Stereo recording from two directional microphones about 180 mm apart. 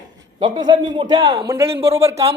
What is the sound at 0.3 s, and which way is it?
A man's voice, 25° right (ahead or behind).